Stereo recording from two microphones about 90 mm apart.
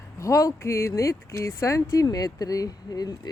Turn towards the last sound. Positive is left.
turn(degrees=45)  # may be behind; listen again after turning